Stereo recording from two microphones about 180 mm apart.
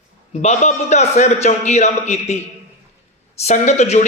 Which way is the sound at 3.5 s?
40° left (ahead or behind).